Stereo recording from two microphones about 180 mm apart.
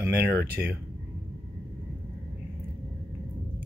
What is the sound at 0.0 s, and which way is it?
Speech, 15° right (ahead or behind).